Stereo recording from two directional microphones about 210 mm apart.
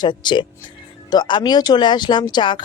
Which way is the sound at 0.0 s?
20° left (ahead or behind).